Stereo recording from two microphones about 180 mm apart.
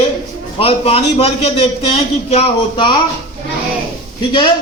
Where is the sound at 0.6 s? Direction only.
35° left (ahead or behind).